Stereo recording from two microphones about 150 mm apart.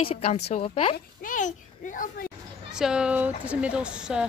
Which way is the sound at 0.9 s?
60° left (ahead or behind).